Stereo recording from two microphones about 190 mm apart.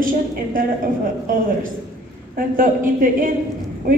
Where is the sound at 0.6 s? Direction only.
50° right (ahead or behind).